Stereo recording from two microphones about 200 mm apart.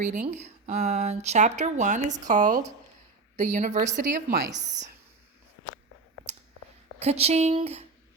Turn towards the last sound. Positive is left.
turn(degrees=-30)  # may be behind; listen again after turning